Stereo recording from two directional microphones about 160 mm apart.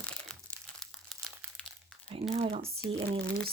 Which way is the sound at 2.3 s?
40° right (ahead or behind).